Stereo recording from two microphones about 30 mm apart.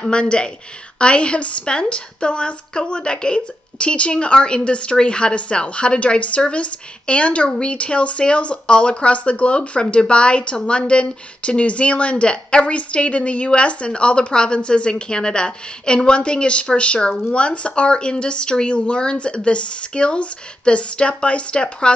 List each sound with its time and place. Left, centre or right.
0.0 s a woman's voice: left
9.1 s speech: left